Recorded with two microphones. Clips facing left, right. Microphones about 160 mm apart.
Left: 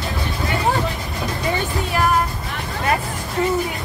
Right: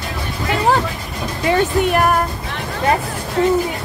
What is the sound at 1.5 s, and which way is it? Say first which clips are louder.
Speech: right 10 dB; 70° right (ahead or behind).